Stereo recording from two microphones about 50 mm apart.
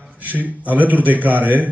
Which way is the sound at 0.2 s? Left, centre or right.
Right.